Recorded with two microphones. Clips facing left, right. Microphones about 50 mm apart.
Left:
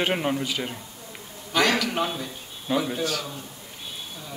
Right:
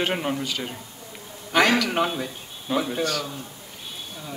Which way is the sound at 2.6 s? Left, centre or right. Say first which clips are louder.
Right 1 dB; centre.